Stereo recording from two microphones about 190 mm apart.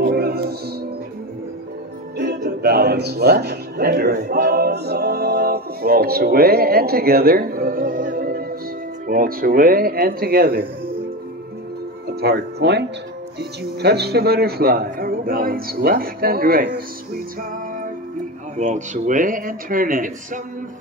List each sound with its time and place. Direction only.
0.0 s music: 55° right (ahead or behind)
2.1 s music: 60° right (ahead or behind)
9.0 s speech: 50° right (ahead or behind)
12.1 s speech: 55° right (ahead or behind)
18.6 s speech: 40° right (ahead or behind)